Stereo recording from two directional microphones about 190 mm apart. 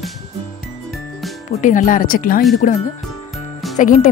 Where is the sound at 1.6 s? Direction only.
45° left (ahead or behind).